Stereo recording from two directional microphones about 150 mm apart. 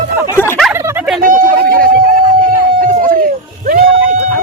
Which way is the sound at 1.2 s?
65° right (ahead or behind).